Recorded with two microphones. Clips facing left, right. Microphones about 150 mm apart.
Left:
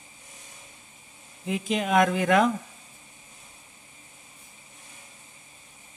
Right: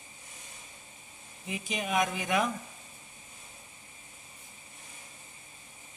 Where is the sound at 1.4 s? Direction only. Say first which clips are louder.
Left 8 dB; 90° left.